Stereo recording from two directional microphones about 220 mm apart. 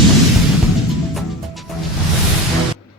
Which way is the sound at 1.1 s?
Centre (ahead or behind).